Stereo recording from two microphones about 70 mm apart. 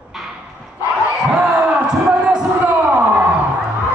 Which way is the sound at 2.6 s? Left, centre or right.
Right.